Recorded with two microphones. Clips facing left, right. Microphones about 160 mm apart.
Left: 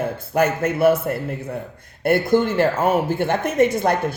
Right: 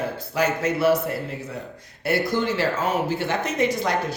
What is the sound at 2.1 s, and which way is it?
Speech, 55° left (ahead or behind).